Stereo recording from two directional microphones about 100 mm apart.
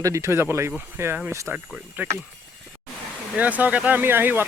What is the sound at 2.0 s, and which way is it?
Speech, 20° right (ahead or behind).